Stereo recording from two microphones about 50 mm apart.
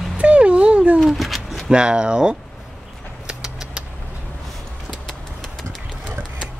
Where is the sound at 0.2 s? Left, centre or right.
Right.